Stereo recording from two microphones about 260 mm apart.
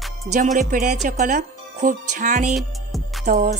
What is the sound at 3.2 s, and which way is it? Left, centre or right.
Speech, right.